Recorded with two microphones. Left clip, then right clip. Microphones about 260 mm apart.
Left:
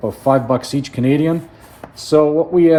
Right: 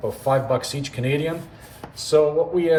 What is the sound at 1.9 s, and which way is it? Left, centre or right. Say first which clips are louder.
Speech: left 5 dB; left.